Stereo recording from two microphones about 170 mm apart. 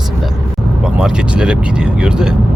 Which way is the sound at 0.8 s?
5° right (ahead or behind).